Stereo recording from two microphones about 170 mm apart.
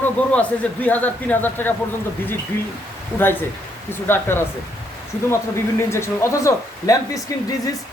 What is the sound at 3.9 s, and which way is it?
Speech, 15° left (ahead or behind).